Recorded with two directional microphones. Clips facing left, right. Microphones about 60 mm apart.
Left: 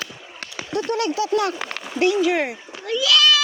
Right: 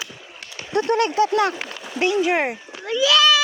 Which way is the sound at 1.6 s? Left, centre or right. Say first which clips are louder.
Left 2 dB; left.